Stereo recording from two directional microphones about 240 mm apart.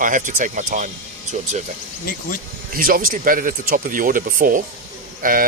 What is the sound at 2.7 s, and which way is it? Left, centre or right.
Speech, right.